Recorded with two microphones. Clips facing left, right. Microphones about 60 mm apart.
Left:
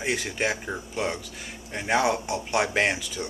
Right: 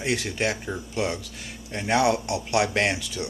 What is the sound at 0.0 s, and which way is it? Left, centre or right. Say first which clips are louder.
Speech: right 1 dB; centre.